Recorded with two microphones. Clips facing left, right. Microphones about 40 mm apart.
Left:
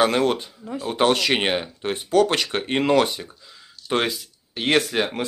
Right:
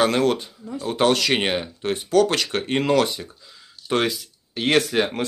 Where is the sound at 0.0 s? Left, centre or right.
Centre.